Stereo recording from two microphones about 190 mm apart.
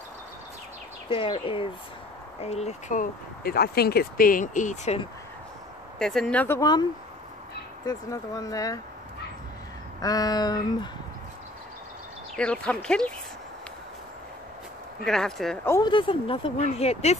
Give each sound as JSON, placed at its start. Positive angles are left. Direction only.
{"t": 1.0, "sound": "speech", "side_deg": 25}
{"t": 5.9, "sound": "speech", "side_deg": 5}
{"t": 10.0, "sound": "speech", "side_deg": 20}
{"t": 12.4, "sound": "speech", "side_deg": 5}
{"t": 15.0, "sound": "speech", "side_deg": 0}
{"t": 15.6, "sound": "speech", "side_deg": 15}
{"t": 15.9, "sound": "speech", "side_deg": 25}